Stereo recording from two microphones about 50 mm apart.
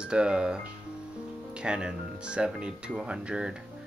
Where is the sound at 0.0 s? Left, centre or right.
Centre.